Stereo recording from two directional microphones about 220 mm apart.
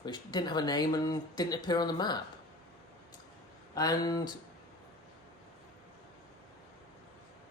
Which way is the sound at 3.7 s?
15° left (ahead or behind).